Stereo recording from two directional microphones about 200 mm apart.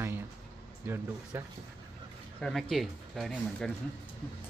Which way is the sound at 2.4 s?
Centre (ahead or behind).